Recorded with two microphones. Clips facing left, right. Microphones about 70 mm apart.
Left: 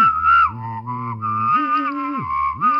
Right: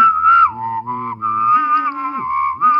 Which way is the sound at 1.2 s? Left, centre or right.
Right.